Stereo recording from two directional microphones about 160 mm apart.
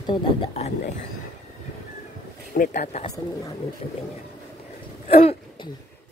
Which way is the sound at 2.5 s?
55° left (ahead or behind).